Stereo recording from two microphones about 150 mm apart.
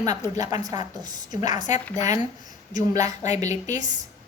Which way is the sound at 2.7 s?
25° right (ahead or behind).